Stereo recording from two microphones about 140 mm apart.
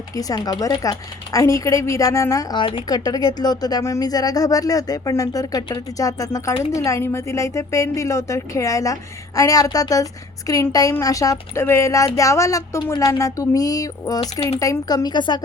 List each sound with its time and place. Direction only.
0.2 s a woman's voice: 25° left (ahead or behind)